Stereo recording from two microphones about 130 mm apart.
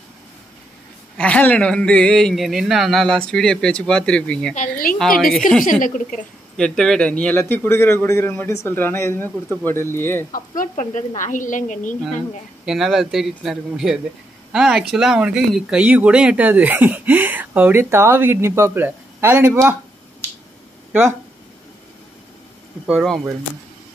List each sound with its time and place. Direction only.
1.1 s speech: 10° left (ahead or behind)
4.6 s a woman's voice: 90° left
6.5 s speech: 5° left (ahead or behind)
10.3 s speech: 90° left; by 11.9 s 75° left (ahead or behind)
12.6 s speech: centre (ahead or behind); by 19.8 s 20° right (ahead or behind)
22.8 s speech: 5° right (ahead or behind)